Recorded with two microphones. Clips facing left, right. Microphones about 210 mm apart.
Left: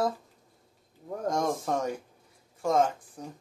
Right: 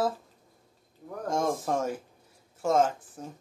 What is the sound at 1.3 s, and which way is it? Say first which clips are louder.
A man's voice: right 1 dB; 5° right (ahead or behind).